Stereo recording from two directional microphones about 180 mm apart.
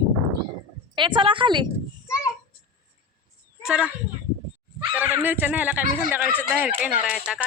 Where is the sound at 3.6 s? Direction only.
5° right (ahead or behind).